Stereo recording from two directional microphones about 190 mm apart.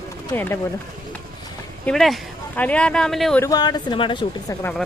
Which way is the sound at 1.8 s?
Centre (ahead or behind).